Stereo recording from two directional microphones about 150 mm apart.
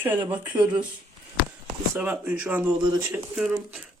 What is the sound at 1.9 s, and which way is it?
A man's voice, 10° right (ahead or behind).